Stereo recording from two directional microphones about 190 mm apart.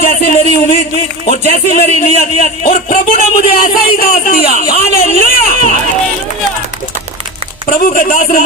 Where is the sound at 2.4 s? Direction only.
45° left (ahead or behind).